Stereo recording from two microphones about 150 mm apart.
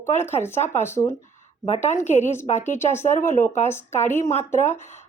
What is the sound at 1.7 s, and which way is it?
Speech, 50° left (ahead or behind).